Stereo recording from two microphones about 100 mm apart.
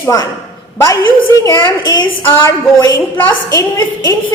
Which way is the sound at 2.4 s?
35° left (ahead or behind).